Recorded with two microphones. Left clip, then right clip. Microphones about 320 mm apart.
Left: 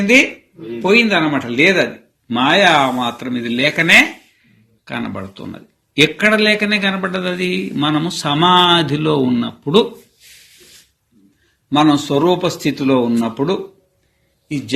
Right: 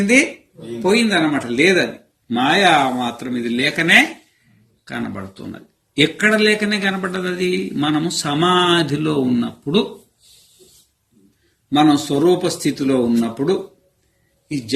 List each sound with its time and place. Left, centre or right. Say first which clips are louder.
0.0 s a man's voice: left 3 dB; centre
11.7 s a man's voice: left 2 dB; centre